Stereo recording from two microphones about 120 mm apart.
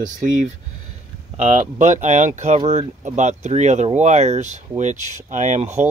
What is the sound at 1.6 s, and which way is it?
Speech, 85° right.